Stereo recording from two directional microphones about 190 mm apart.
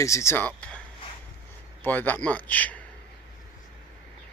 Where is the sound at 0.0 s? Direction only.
15° left (ahead or behind).